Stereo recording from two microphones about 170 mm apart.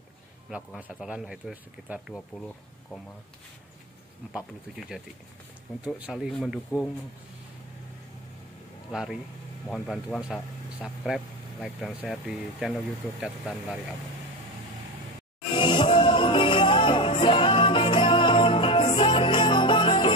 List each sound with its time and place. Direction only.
0.7 s speech: 5° right (ahead or behind)
2.3 s speech: 10° left (ahead or behind)
4.7 s speech: centre (ahead or behind)
8.9 s speech: 5° right (ahead or behind)
15.5 s music: 30° left (ahead or behind)